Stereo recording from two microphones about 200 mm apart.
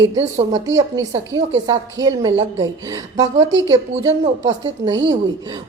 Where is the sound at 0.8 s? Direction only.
15° right (ahead or behind).